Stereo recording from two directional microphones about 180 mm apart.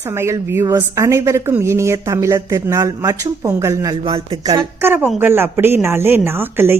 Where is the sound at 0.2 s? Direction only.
15° right (ahead or behind).